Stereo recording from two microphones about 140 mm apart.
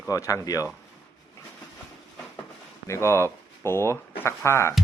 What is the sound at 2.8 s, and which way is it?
Speech, 20° left (ahead or behind).